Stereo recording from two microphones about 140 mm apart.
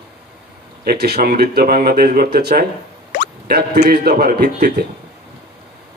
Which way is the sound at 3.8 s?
90° right.